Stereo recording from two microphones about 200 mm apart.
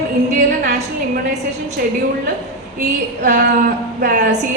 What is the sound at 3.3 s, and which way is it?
Speech, 50° right (ahead or behind).